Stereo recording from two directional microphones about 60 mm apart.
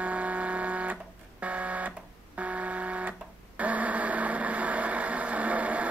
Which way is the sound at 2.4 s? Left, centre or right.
Right.